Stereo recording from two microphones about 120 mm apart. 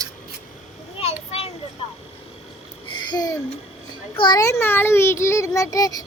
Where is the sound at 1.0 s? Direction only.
55° left (ahead or behind).